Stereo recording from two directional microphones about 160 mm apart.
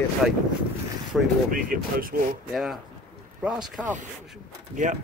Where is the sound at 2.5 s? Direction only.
Centre (ahead or behind).